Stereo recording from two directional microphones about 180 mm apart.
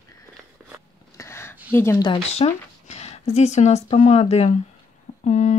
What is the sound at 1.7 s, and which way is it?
Speech, 15° left (ahead or behind).